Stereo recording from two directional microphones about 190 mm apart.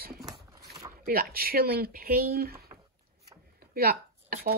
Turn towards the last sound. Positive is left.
turn(degrees=-50)  # may be behind; listen again after turning